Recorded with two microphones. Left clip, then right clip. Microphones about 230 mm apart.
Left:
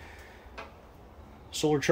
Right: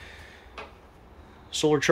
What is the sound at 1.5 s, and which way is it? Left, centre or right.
Speech, centre.